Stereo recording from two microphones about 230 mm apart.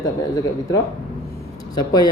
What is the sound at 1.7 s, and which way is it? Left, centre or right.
Speech, centre.